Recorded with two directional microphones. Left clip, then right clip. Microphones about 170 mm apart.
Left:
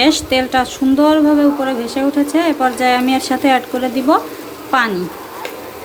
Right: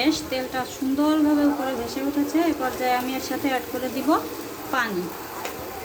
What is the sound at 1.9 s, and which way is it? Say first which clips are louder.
Speech: left 9 dB; 50° left (ahead or behind).